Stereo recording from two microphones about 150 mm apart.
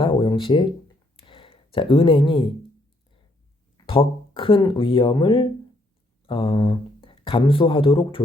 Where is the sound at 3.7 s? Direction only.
40° left (ahead or behind).